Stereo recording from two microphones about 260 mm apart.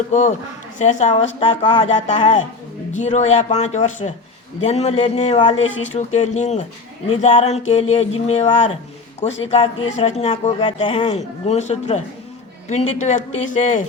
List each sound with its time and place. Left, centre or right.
0.1 s speech: left